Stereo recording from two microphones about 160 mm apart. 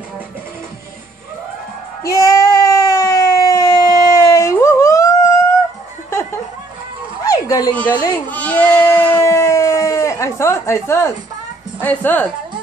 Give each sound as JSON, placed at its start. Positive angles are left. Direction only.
{"t": 2.0, "sound": "a sound", "side_deg": 20}
{"t": 7.9, "sound": "speech", "side_deg": 25}
{"t": 8.3, "sound": "sheep", "side_deg": 10}
{"t": 11.8, "sound": "a woman's voice", "side_deg": 10}